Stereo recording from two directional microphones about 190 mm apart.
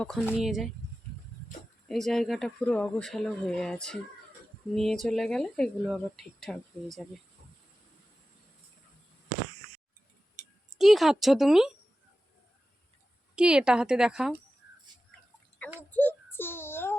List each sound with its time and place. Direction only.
0.0 s speech: 5° left (ahead or behind)
1.9 s speech: centre (ahead or behind)
10.4 s a sound: 35° right (ahead or behind)
10.8 s speech: centre (ahead or behind)
13.3 s speech: 5° right (ahead or behind)
15.9 s child singing: 10° left (ahead or behind)